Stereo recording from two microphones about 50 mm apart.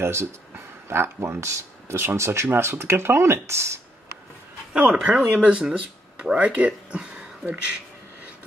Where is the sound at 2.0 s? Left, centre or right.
Right.